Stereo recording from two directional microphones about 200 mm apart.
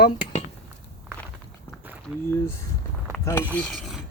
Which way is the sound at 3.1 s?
10° left (ahead or behind).